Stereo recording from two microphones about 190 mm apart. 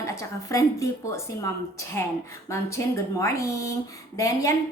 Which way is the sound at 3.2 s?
15° left (ahead or behind).